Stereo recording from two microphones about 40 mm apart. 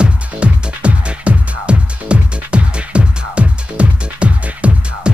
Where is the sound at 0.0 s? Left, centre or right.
Right.